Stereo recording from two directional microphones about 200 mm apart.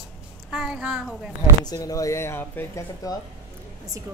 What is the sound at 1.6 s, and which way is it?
Speech, 15° left (ahead or behind).